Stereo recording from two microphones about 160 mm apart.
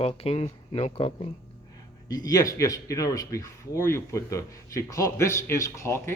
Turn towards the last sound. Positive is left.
turn(degrees=15)  # may be behind; listen again after turning